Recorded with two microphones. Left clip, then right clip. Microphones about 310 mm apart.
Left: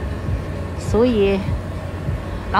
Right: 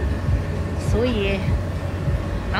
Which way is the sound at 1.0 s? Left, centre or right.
Centre.